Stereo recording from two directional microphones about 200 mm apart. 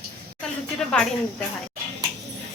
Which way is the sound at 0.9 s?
5° left (ahead or behind).